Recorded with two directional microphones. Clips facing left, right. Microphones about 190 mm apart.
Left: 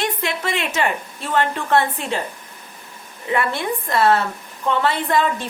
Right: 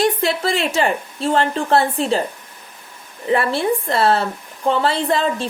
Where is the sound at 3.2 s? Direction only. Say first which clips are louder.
Right 4 dB; 30° right (ahead or behind).